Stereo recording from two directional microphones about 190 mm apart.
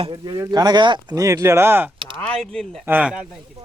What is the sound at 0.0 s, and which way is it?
Speech, 25° right (ahead or behind).